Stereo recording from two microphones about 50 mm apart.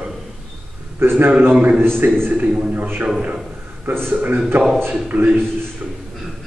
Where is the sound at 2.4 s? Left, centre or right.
Centre.